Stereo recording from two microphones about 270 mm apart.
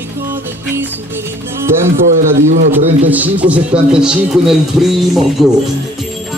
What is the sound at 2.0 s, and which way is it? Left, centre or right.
Speech, right.